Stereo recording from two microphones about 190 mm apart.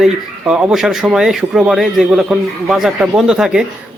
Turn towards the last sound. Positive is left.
turn(degrees=-5)  # may be behind; listen again after turning